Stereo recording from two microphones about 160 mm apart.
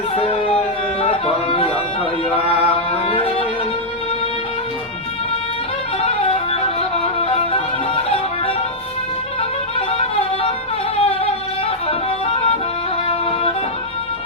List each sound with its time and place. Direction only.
0.2 s carnatic music: 35° left (ahead or behind)
1.0 s music: 35° left (ahead or behind)
3.1 s music: 35° left (ahead or behind)
6.0 s music: 35° left (ahead or behind)
10.9 s a sound: 35° left (ahead or behind)